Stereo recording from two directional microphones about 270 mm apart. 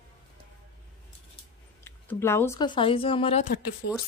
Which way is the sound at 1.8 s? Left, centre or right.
Centre.